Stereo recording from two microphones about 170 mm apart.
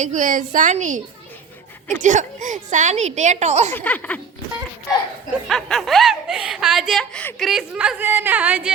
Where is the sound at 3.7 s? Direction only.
10° left (ahead or behind).